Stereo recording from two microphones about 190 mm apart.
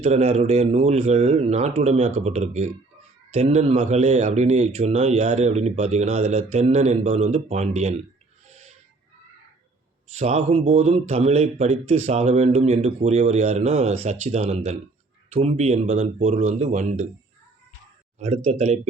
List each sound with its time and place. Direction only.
0.0 s speech: 35° right (ahead or behind)
10.1 s speech: 35° right (ahead or behind)
18.2 s speech: 35° right (ahead or behind)